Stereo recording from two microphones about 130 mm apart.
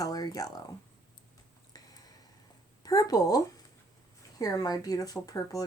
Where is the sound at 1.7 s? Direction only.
30° left (ahead or behind).